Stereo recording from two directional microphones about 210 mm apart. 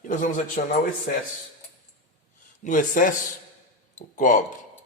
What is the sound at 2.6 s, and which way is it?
Speech, 40° left (ahead or behind).